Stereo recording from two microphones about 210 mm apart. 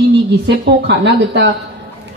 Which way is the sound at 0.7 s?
50° right (ahead or behind).